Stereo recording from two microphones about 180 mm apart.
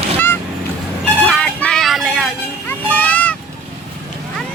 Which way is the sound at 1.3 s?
5° left (ahead or behind).